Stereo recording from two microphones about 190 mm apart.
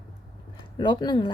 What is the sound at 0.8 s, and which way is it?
Speech, 25° left (ahead or behind).